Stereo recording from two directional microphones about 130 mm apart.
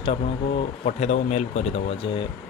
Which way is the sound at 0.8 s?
60° left (ahead or behind).